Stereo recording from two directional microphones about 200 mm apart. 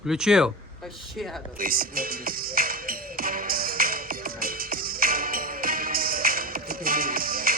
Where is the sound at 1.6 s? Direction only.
45° right (ahead or behind).